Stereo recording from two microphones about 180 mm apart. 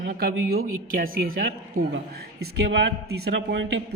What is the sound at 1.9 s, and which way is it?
A man's voice, 65° right (ahead or behind).